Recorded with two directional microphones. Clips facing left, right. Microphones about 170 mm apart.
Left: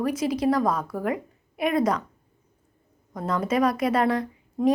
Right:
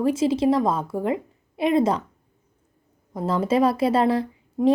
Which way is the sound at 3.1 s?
25° right (ahead or behind).